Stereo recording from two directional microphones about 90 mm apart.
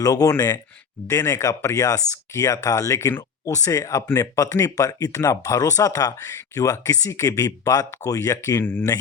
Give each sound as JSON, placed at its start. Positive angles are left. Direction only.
{"t": 0.0, "sound": "speech", "side_deg": 40}